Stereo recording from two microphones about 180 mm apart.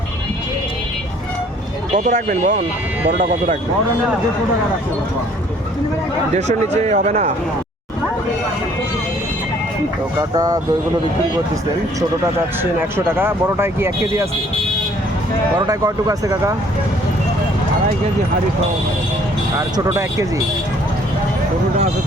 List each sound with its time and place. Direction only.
2.0 s speech: 45° right (ahead or behind)
6.3 s speech: 40° right (ahead or behind)
10.2 s speech: 20° right (ahead or behind)
13.1 s speech: 15° right (ahead or behind)
15.5 s speech: 20° right (ahead or behind)
19.5 s speech: 20° right (ahead or behind)